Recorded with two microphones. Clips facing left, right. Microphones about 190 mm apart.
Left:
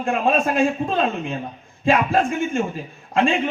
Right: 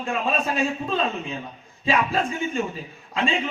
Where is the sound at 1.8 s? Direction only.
50° left (ahead or behind).